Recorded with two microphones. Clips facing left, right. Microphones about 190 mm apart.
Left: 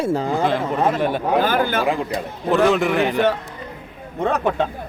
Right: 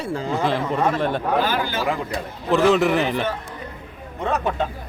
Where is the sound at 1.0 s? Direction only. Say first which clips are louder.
Left 2 dB; 5° left (ahead or behind).